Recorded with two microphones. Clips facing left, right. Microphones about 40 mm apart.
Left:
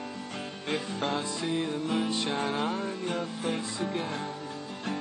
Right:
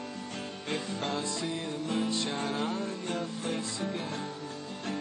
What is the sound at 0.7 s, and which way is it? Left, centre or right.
Music, centre.